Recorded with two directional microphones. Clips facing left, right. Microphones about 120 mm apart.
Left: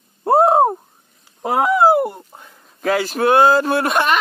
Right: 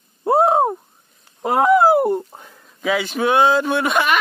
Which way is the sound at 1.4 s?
10° left (ahead or behind).